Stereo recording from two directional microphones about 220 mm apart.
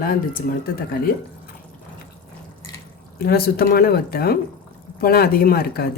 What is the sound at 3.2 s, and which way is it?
Speech, 45° left (ahead or behind).